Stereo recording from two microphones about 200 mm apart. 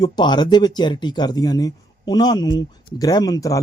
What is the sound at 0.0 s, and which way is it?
Speech, 20° left (ahead or behind).